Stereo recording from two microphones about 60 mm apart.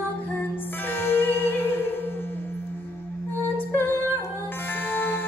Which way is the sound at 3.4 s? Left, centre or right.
Left.